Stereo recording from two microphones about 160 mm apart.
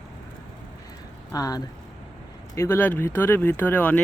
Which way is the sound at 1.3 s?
25° left (ahead or behind).